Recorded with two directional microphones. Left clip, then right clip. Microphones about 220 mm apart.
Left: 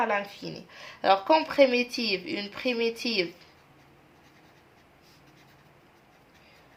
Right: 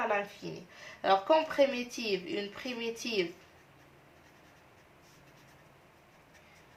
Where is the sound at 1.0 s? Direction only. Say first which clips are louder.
Left 4 dB; 45° left (ahead or behind).